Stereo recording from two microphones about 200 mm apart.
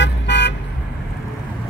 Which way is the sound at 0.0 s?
60° left (ahead or behind).